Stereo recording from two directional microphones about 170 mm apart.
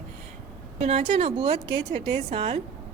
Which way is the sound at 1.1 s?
35° right (ahead or behind).